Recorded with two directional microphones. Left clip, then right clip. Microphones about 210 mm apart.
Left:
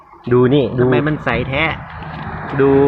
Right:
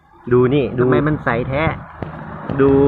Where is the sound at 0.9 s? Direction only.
5° left (ahead or behind).